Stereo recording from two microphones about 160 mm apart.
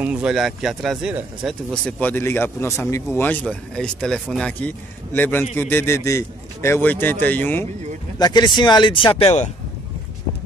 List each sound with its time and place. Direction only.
0.0 s speech: 5° right (ahead or behind)
1.7 s speech: 10° left (ahead or behind)
8.2 s speech: 25° left (ahead or behind)